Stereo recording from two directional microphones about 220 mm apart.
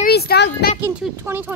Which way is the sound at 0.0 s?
45° left (ahead or behind).